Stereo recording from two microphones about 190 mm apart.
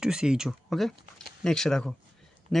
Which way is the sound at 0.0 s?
5° right (ahead or behind).